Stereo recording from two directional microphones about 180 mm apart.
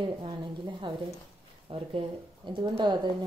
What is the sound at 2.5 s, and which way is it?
Speech, 25° right (ahead or behind).